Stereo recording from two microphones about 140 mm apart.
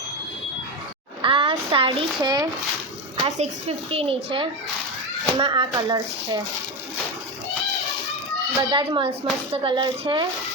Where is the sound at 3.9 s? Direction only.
40° right (ahead or behind).